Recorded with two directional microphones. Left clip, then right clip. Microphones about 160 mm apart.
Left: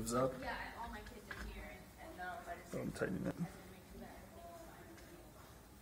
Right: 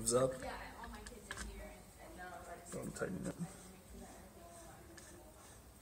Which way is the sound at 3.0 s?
45° left (ahead or behind).